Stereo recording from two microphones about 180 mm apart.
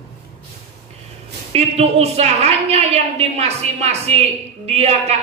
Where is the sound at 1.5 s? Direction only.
35° right (ahead or behind).